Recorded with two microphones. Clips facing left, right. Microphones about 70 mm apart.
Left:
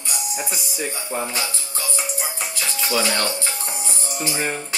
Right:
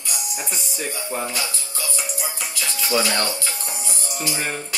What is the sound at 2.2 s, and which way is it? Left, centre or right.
Music, left.